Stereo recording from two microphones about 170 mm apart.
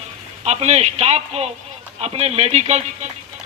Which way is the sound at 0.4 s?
40° right (ahead or behind).